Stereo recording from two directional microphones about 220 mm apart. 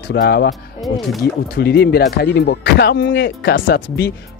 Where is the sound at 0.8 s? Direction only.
Centre (ahead or behind).